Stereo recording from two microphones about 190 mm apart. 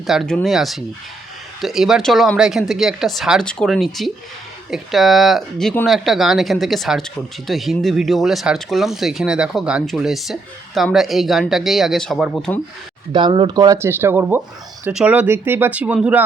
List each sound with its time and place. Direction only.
0.1 s speech: centre (ahead or behind)
13.1 s speech: 25° right (ahead or behind); by 16.2 s 5° right (ahead or behind)